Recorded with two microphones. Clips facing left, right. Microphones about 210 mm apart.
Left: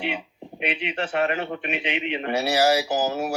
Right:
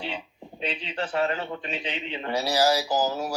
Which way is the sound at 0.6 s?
65° left (ahead or behind).